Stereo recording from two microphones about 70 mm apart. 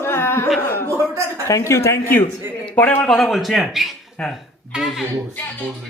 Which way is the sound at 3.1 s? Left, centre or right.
Centre.